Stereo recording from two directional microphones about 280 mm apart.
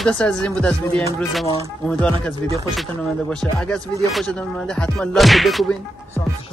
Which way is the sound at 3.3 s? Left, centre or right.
Centre.